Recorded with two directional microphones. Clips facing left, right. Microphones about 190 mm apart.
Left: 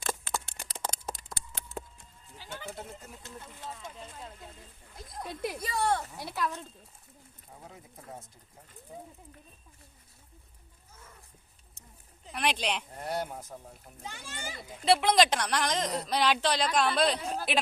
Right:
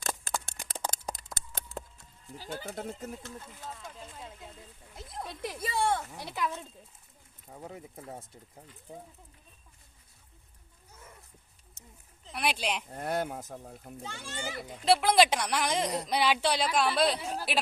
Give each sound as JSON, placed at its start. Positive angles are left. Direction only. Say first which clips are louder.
{"t": 0.4, "sound": "a sound", "louder": "right 1 dB", "side_deg": -45}
{"t": 2.4, "sound": "speech", "louder": "right 4 dB", "side_deg": -40}
{"t": 3.7, "sound": "speech", "louder": "left 1 dB", "side_deg": 0}
{"t": 5.2, "sound": "a child's voice", "louder": "left 3 dB", "side_deg": 10}
{"t": 5.5, "sound": "speech", "louder": "right 1 dB", "side_deg": -25}
{"t": 6.2, "sound": "speech", "louder": "even", "side_deg": 0}
{"t": 12.3, "sound": "a woman's voice", "louder": "left 1 dB", "side_deg": -10}
{"t": 13.0, "sound": "speech", "louder": "right 2 dB", "side_deg": -50}
{"t": 14.0, "sound": "a child's voice", "louder": "right 2 dB", "side_deg": 15}
{"t": 14.8, "sound": "a woman's voice", "louder": "even", "side_deg": -5}